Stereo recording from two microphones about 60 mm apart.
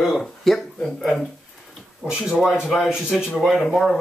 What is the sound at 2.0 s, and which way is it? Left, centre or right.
Speech, centre.